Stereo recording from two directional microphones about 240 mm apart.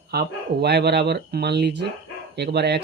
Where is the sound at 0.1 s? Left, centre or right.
Right.